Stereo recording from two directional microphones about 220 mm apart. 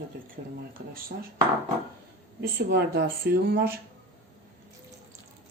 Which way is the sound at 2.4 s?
45° right (ahead or behind).